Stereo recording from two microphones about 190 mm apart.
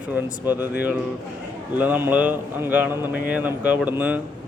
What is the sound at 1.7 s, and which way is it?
Speech, 10° right (ahead or behind).